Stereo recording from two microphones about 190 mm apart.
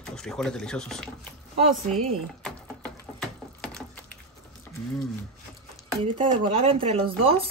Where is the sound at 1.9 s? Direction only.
5° left (ahead or behind).